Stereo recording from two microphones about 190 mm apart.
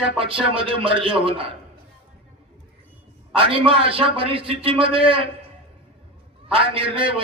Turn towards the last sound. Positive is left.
turn(degrees=-30)  # may be behind; listen again after turning